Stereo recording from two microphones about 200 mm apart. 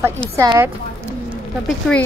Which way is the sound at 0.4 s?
15° right (ahead or behind).